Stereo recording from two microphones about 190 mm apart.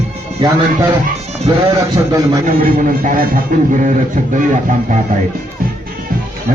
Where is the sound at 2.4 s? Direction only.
45° right (ahead or behind).